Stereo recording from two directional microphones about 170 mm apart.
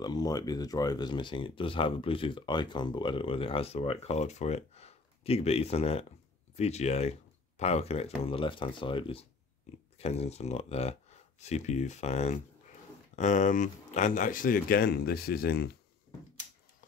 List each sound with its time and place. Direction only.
0.0 s speech: 25° left (ahead or behind); by 15.7 s 70° left (ahead or behind)